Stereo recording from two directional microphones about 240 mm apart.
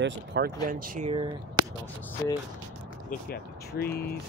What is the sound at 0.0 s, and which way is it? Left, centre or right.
Speech, right.